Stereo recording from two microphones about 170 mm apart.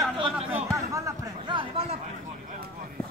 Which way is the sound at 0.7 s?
20° right (ahead or behind).